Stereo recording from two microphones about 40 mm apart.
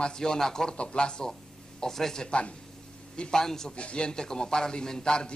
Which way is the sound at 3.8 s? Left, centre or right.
Left.